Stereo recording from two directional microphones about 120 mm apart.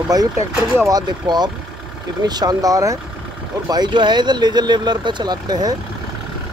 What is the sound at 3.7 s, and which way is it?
Speech, 40° right (ahead or behind).